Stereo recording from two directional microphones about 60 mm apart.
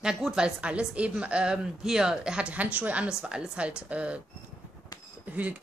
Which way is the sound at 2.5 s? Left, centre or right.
Right.